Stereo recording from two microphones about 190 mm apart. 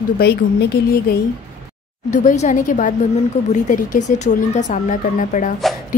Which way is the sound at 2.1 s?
40° left (ahead or behind).